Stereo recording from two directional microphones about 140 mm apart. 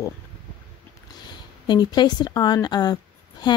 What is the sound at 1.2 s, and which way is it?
Speech, 30° left (ahead or behind).